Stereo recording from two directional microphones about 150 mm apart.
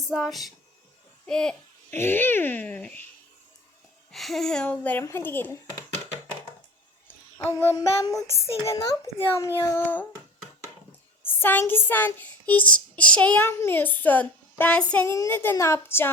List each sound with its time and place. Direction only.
0.1 s a child's voice: centre (ahead or behind)
2.0 s child singing: 15° left (ahead or behind)
4.1 s child singing: centre (ahead or behind)
7.3 s a child's voice: 15° left (ahead or behind)
11.2 s child singing: 15° left (ahead or behind)